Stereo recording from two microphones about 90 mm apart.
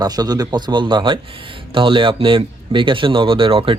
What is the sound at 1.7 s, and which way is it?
Speech, 70° right (ahead or behind).